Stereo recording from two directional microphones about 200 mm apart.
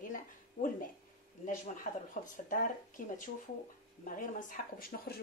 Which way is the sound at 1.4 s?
40° left (ahead or behind).